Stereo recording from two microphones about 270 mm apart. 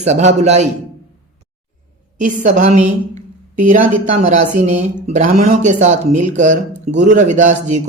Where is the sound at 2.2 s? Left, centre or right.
Right.